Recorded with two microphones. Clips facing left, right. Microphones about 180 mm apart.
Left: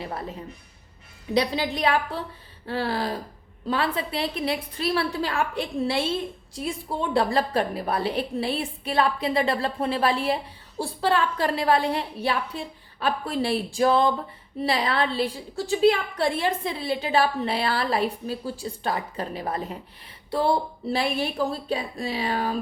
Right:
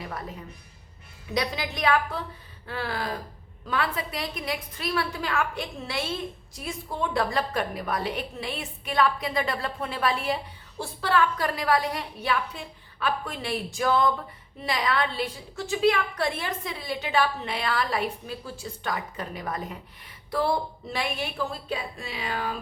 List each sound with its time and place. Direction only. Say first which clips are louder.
0.0 s a woman's voice: left 3 dB; 30° left (ahead or behind)